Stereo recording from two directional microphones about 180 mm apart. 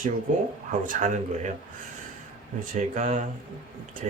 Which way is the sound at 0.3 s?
45° right (ahead or behind).